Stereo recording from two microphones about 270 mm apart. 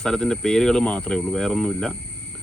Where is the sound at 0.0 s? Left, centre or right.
Centre.